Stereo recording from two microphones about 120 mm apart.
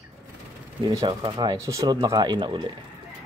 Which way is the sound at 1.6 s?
25° right (ahead or behind).